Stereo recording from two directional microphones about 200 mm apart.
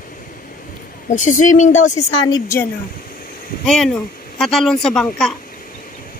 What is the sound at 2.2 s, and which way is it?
Speech, 15° left (ahead or behind).